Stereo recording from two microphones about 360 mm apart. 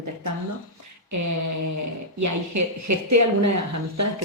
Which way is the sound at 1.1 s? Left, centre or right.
Right.